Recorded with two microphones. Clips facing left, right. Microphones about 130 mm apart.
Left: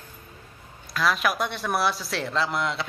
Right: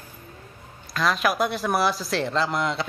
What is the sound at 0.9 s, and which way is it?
Speech, centre (ahead or behind).